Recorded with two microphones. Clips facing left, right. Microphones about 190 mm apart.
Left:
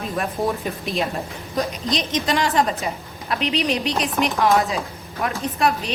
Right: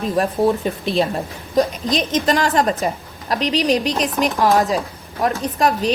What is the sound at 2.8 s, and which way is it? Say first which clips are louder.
A woman's voice: right 5 dB; 40° right (ahead or behind).